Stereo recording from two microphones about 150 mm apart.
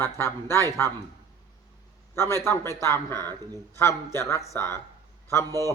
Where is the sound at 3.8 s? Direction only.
20° left (ahead or behind).